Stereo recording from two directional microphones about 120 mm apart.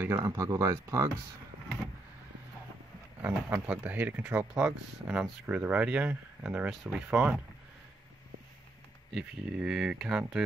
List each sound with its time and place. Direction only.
0.2 s speech: 30° right (ahead or behind)
3.2 s speech: 15° right (ahead or behind)
9.1 s speech: 5° right (ahead or behind)